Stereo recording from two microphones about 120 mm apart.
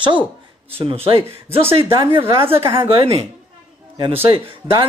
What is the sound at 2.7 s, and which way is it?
Speech, 45° right (ahead or behind).